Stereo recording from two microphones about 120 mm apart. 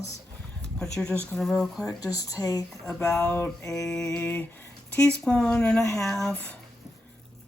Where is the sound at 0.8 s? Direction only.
5° left (ahead or behind).